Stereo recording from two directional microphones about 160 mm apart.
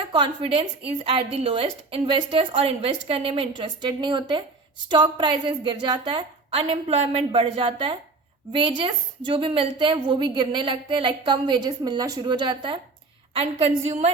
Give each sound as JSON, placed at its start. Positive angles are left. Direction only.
{"t": 0.1, "sound": "a woman's voice", "side_deg": -30}
{"t": 13.3, "sound": "a woman's voice", "side_deg": -40}